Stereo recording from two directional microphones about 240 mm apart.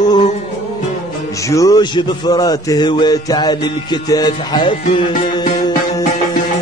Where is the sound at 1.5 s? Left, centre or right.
Centre.